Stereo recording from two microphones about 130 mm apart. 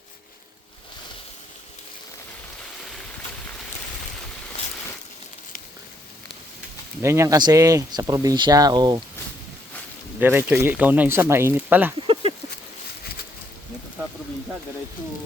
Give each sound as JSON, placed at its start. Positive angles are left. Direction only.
{"t": 7.0, "sound": "speech", "side_deg": -20}
{"t": 10.2, "sound": "speech", "side_deg": -15}